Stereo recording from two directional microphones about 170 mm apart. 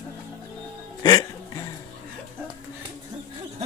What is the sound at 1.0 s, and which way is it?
Music, 20° left (ahead or behind).